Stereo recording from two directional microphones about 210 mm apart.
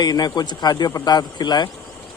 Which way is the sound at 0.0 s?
20° left (ahead or behind).